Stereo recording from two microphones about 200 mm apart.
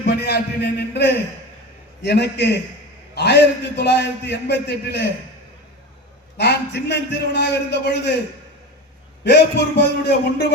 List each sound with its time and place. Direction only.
0.0 s a man's voice: 55° left (ahead or behind)
6.3 s a man's voice: 60° left (ahead or behind)
9.2 s a man's voice: 60° left (ahead or behind)